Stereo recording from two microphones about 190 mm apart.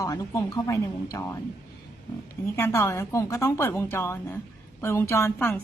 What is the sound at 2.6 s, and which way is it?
A woman's voice, 15° left (ahead or behind).